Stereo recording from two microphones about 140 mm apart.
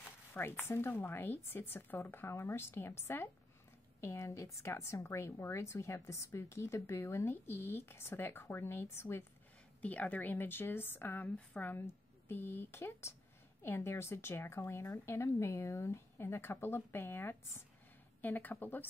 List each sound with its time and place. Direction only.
0.3 s a woman's voice: 15° left (ahead or behind)